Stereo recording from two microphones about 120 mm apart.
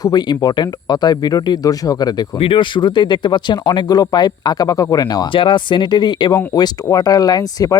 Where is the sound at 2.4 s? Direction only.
45° left (ahead or behind).